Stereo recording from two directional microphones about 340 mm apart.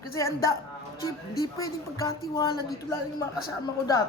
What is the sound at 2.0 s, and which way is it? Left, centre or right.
Speech, centre.